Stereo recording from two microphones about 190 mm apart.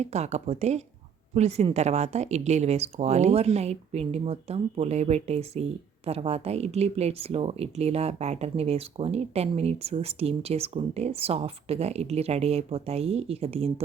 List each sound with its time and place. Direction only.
0.0 s speech: 35° right (ahead or behind)